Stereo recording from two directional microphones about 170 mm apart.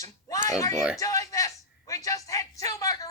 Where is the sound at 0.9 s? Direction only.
20° left (ahead or behind).